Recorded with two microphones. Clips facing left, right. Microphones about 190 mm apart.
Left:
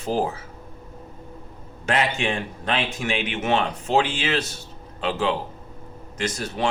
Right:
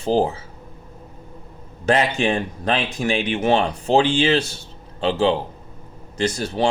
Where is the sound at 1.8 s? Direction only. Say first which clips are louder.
Right 5 dB; 35° right (ahead or behind).